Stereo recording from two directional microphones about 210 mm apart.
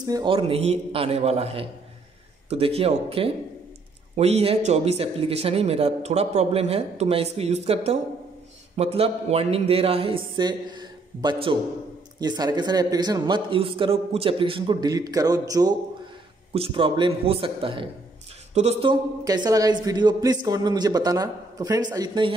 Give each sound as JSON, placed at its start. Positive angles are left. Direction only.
{"t": 0.0, "sound": "speech", "side_deg": -20}